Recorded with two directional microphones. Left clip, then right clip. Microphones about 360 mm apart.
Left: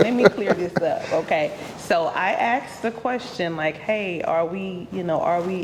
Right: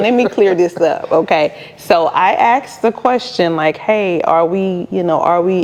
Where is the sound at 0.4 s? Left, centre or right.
Right.